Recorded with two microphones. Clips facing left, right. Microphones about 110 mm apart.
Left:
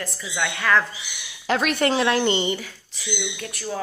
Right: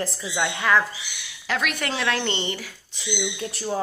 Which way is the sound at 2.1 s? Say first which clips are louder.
Left 5 dB; 10° left (ahead or behind).